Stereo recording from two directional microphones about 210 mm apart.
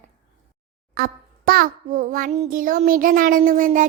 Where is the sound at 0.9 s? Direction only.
45° right (ahead or behind).